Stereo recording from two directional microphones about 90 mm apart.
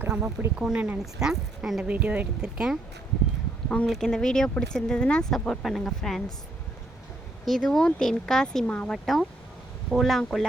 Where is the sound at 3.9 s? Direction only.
5° left (ahead or behind).